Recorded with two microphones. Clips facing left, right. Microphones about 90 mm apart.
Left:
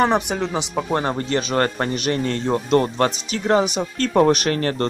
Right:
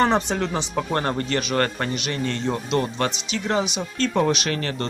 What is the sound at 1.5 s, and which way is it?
Speech, 30° left (ahead or behind).